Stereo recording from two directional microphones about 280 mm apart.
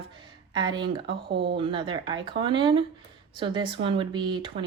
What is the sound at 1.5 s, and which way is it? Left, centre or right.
Speech, centre.